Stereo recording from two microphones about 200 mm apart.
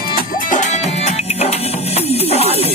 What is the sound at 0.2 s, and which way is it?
Music, 40° left (ahead or behind).